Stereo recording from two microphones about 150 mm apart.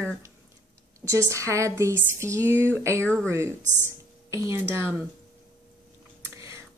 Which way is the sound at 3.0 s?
5° left (ahead or behind).